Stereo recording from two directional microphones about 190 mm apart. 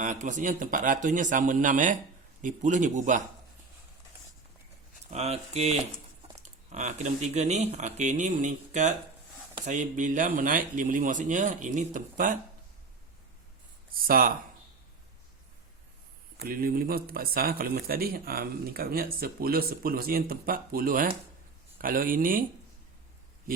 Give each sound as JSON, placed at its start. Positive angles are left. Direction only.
{"t": 0.0, "sound": "speech", "side_deg": -40}
{"t": 5.1, "sound": "speech", "side_deg": -35}
{"t": 14.1, "sound": "speech", "side_deg": -50}
{"t": 16.4, "sound": "speech", "side_deg": -50}